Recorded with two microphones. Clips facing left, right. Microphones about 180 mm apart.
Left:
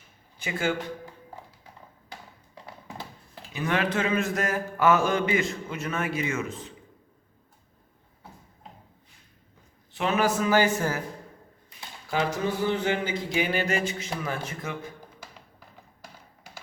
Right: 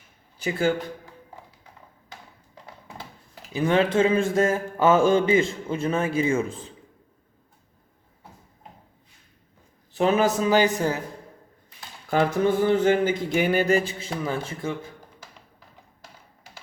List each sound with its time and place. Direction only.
3.5 s a man's voice: 30° right (ahead or behind)
9.9 s a man's voice: 35° right (ahead or behind); by 11.0 s 20° right (ahead or behind)
12.1 s speech: 50° right (ahead or behind); by 14.8 s 30° right (ahead or behind)